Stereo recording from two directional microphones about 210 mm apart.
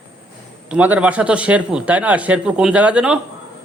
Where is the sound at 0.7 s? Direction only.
5° right (ahead or behind).